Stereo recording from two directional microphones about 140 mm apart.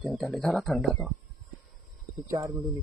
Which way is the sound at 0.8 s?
10° right (ahead or behind).